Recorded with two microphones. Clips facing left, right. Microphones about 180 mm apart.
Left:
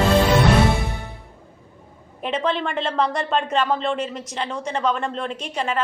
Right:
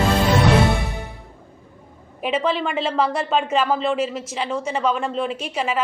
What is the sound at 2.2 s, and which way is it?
Speech, 5° right (ahead or behind).